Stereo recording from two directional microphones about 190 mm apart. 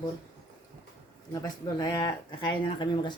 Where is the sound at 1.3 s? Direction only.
20° left (ahead or behind).